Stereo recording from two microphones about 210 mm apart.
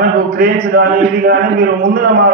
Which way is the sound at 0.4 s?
45° right (ahead or behind).